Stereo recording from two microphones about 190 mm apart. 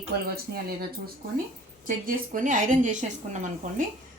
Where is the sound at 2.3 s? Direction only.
45° right (ahead or behind).